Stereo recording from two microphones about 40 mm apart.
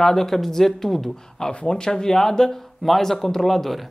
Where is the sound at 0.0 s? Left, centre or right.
Centre.